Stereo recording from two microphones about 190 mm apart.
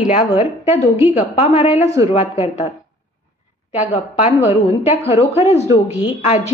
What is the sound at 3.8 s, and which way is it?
A woman's voice, 35° left (ahead or behind).